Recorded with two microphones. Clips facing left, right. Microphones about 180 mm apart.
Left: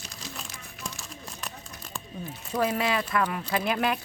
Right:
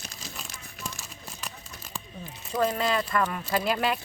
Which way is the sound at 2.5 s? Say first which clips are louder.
Even; 5° left (ahead or behind).